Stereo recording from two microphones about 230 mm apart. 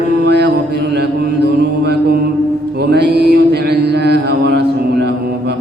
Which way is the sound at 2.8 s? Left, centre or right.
Right.